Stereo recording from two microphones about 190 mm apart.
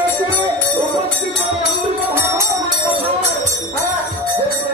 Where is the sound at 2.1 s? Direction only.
10° right (ahead or behind).